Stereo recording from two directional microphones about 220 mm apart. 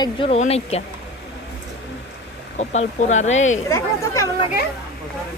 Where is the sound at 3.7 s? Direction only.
15° left (ahead or behind).